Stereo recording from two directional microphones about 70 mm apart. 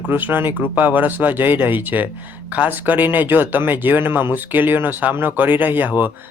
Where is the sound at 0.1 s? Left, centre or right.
Right.